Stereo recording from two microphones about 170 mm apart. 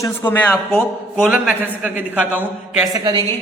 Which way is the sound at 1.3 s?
5° right (ahead or behind).